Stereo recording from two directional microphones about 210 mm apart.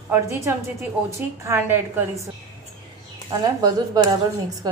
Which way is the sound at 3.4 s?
20° right (ahead or behind).